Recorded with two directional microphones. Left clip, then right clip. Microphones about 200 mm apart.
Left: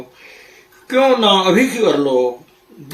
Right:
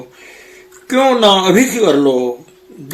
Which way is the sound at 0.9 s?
50° right (ahead or behind).